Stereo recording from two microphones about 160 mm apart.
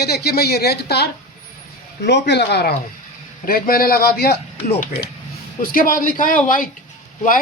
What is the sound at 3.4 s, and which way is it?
Speech, 65° left (ahead or behind).